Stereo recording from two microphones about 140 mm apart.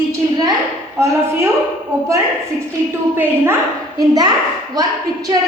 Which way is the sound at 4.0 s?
30° right (ahead or behind).